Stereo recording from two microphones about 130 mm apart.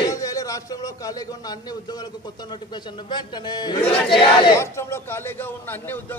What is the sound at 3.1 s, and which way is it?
Speech, 35° left (ahead or behind).